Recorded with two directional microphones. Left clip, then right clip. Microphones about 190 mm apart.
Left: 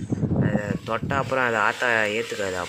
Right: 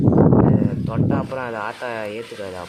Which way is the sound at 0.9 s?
5° left (ahead or behind).